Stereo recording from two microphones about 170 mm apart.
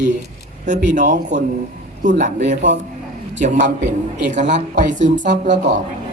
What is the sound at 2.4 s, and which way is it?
Speech, 85° right.